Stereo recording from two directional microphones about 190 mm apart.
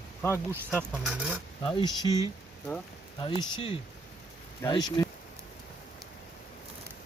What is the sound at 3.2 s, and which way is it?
Speech, 25° left (ahead or behind).